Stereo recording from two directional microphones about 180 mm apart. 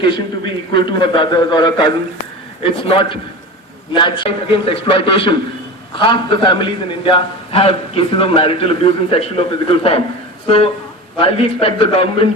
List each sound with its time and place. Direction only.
0.7 s a man's voice: 25° left (ahead or behind)